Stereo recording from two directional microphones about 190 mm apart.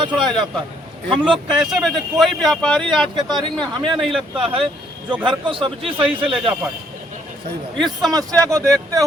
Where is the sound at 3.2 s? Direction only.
20° right (ahead or behind).